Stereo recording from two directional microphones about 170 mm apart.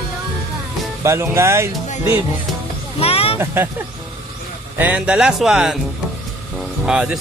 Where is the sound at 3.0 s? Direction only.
35° left (ahead or behind).